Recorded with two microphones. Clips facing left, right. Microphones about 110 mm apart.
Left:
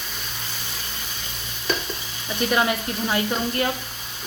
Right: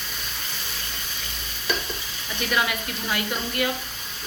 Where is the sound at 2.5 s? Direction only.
30° left (ahead or behind).